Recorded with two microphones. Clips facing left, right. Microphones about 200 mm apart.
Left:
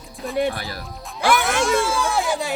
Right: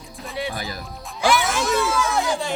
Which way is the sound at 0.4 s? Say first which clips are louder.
Left 7 dB; 50° left (ahead or behind).